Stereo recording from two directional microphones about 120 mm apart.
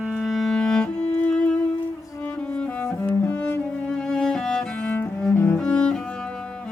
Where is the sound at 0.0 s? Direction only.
5° right (ahead or behind).